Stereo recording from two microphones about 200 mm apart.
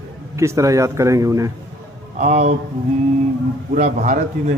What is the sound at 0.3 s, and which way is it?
Speech, 15° right (ahead or behind).